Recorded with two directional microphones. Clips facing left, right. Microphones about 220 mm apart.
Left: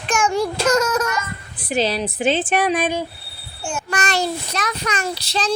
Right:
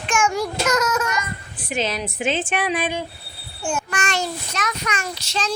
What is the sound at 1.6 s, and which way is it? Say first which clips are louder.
A child's voice: left 4 dB; 35° left (ahead or behind).